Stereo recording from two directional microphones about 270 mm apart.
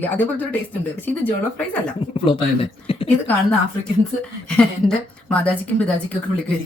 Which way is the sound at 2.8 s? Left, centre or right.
Left.